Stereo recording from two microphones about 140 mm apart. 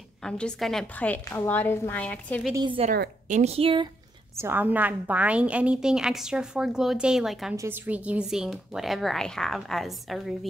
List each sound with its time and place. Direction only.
0.2 s a woman's voice: 5° left (ahead or behind)
2.5 s a woman's voice: 35° right (ahead or behind)
2.9 s a woman's voice: 60° right (ahead or behind); by 3.9 s 40° right (ahead or behind)
4.4 s a woman's voice: 15° right (ahead or behind)
7.5 s a woman's voice: 15° right (ahead or behind); by 10.3 s centre (ahead or behind)